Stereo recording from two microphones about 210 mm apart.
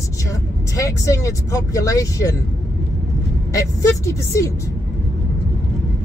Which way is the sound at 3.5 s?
15° left (ahead or behind).